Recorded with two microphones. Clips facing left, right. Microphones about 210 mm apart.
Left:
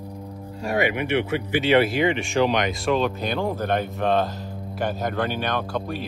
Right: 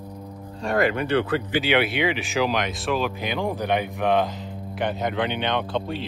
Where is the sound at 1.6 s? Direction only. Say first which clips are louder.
Left 6 dB; centre (ahead or behind).